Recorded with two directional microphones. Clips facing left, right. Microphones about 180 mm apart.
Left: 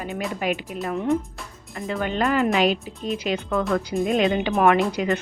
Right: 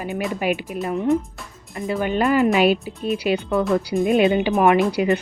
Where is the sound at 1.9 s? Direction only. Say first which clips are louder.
Right 4 dB; 10° right (ahead or behind).